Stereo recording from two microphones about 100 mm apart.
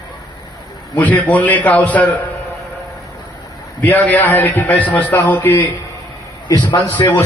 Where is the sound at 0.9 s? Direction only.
15° left (ahead or behind).